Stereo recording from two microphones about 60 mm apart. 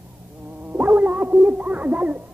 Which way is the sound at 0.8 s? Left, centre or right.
Right.